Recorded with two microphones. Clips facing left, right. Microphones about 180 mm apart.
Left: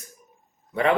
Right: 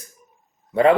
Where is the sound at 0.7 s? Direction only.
30° right (ahead or behind).